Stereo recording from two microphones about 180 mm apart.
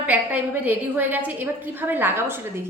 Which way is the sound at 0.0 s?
10° right (ahead or behind).